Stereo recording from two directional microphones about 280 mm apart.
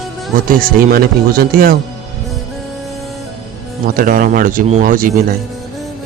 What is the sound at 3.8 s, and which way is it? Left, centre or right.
Speech, right.